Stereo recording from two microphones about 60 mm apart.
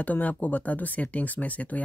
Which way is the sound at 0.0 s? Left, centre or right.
Left.